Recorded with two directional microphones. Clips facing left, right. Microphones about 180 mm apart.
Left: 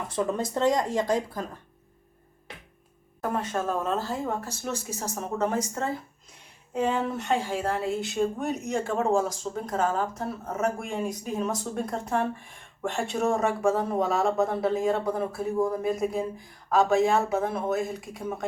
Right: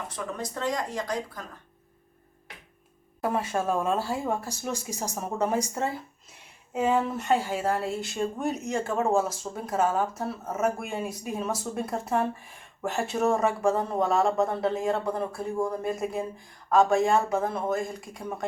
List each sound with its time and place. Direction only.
0.3 s speech: 25° left (ahead or behind)
3.2 s speech: 10° right (ahead or behind)